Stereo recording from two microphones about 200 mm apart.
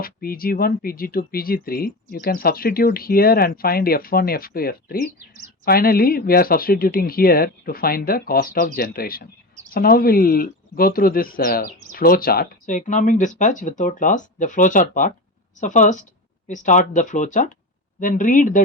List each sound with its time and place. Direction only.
0.0 s speech: 45° left (ahead or behind)